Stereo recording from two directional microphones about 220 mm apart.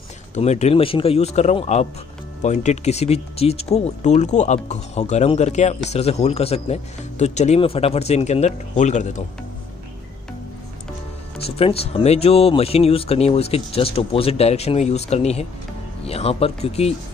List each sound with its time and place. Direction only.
0.3 s speech: 30° left (ahead or behind)
11.4 s speech: 25° left (ahead or behind)